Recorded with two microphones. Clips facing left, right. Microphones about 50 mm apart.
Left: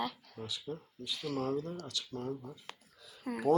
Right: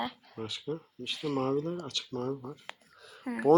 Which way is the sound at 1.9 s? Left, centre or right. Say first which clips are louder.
Right 5 dB; right.